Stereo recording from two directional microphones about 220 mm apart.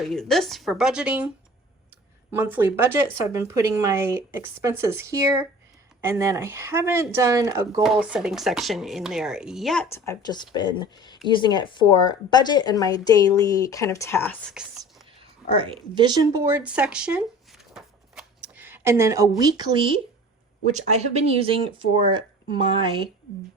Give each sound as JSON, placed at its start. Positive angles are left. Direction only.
{"t": 0.1, "sound": "speech", "side_deg": 0}
{"t": 2.3, "sound": "speech", "side_deg": -10}
{"t": 7.8, "sound": "speech", "side_deg": 0}
{"t": 9.9, "sound": "speech", "side_deg": 15}
{"t": 14.5, "sound": "whispering", "side_deg": -5}
{"t": 15.5, "sound": "speech", "side_deg": -25}
{"t": 17.7, "sound": "shuffling cards", "side_deg": -5}
{"t": 19.4, "sound": "speech", "side_deg": -20}